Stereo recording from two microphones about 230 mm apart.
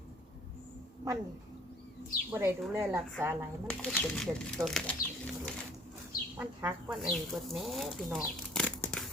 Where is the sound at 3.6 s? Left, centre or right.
Centre.